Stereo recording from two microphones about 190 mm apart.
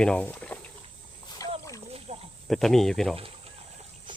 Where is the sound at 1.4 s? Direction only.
20° left (ahead or behind).